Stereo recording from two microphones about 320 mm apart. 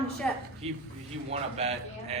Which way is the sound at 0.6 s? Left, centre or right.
Centre.